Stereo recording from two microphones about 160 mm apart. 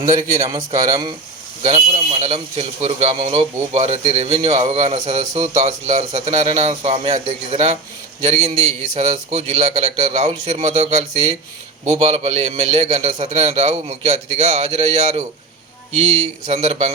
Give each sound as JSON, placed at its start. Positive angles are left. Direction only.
{"t": 0.0, "sound": "a man's voice", "side_deg": -20}
{"t": 1.6, "sound": "a man's voice", "side_deg": -40}
{"t": 9.0, "sound": "a man's voice", "side_deg": -45}